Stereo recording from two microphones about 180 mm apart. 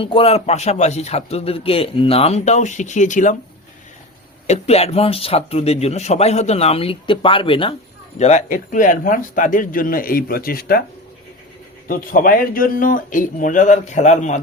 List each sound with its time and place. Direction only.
0.0 s speech: 30° left (ahead or behind)
4.4 s speech: 35° left (ahead or behind)
8.2 s speech: 40° left (ahead or behind); by 10.8 s 55° left (ahead or behind)
11.9 s speech: 50° left (ahead or behind)